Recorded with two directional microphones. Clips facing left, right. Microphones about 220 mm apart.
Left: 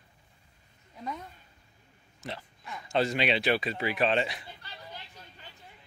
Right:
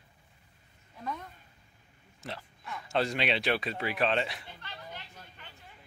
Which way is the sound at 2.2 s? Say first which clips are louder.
Left 1 dB; centre (ahead or behind).